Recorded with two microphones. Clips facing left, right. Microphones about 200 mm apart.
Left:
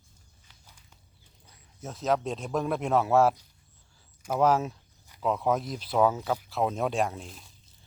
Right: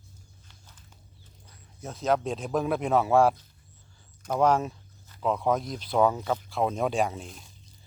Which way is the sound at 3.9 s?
5° left (ahead or behind).